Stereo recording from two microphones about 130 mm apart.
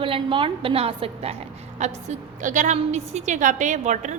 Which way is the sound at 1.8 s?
65° right (ahead or behind).